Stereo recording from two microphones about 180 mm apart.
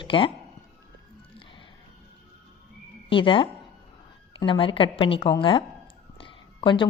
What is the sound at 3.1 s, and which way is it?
A woman's voice, 30° left (ahead or behind).